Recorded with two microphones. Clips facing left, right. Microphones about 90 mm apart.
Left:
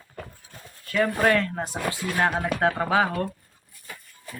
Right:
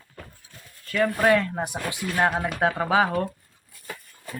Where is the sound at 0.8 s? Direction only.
Centre (ahead or behind).